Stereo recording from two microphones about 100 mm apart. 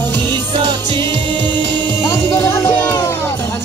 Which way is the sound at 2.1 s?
25° left (ahead or behind).